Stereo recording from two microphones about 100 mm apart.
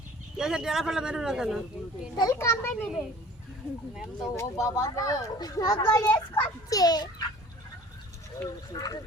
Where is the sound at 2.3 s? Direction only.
25° left (ahead or behind).